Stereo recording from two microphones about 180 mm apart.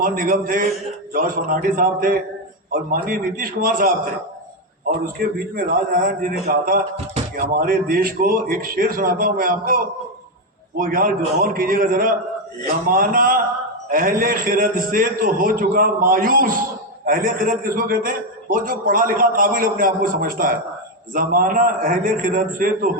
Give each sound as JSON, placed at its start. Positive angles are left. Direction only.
{"t": 0.0, "sound": "a man's voice", "side_deg": -50}
{"t": 5.2, "sound": "a man's voice", "side_deg": -50}
{"t": 10.8, "sound": "a man's voice", "side_deg": -50}